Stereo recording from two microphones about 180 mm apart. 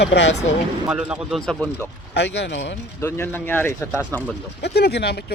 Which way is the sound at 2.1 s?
70° left (ahead or behind).